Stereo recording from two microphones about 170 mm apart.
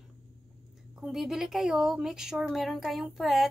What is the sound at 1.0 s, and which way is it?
A woman's voice, centre (ahead or behind).